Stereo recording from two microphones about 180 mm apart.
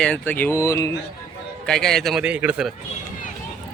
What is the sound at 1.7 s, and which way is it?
Speech, 5° left (ahead or behind).